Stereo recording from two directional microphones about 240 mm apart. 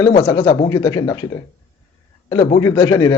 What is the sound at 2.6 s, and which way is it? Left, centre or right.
Speech, centre.